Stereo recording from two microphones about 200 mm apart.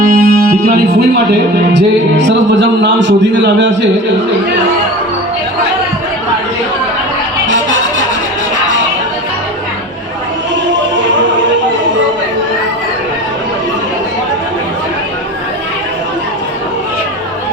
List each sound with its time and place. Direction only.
0.0 s music: 45° right (ahead or behind)
1.7 s speech: 60° right (ahead or behind)
7.4 s music: 70° right (ahead or behind)